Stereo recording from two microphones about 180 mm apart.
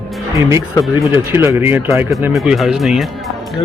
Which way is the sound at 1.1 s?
10° right (ahead or behind).